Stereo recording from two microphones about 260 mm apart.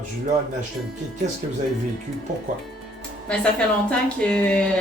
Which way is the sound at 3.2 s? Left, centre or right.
Centre.